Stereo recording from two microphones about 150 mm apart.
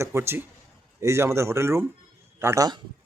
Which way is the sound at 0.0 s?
15° right (ahead or behind).